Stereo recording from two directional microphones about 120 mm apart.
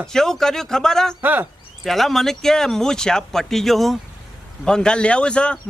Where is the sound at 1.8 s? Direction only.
Centre (ahead or behind).